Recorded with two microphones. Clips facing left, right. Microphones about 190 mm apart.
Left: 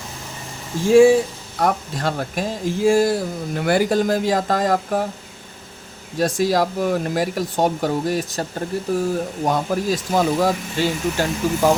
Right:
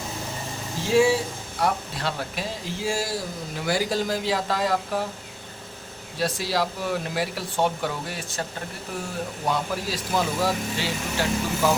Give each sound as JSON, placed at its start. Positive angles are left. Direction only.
{"t": 0.9, "sound": "speech", "side_deg": 50}
{"t": 6.1, "sound": "speech", "side_deg": 45}
{"t": 9.5, "sound": "speech", "side_deg": 45}